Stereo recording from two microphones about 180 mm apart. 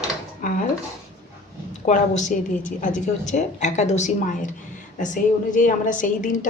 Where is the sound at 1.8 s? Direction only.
40° left (ahead or behind).